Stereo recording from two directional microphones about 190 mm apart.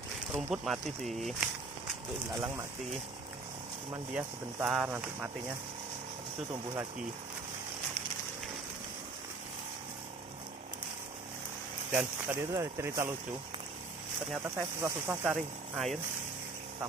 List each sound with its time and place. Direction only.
0.3 s speech: centre (ahead or behind)
4.1 s speech: 10° right (ahead or behind)
6.5 s speech: 20° right (ahead or behind)
11.9 s speech: 10° right (ahead or behind)
14.4 s speech: 15° right (ahead or behind)